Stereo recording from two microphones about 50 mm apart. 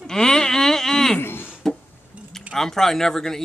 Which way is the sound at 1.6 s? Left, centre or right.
Centre.